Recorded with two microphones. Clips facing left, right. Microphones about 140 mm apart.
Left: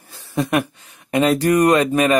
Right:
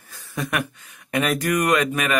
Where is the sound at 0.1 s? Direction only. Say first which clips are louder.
Left 7 dB; 25° left (ahead or behind).